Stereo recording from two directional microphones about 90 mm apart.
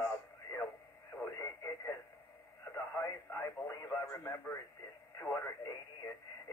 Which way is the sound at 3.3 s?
30° left (ahead or behind).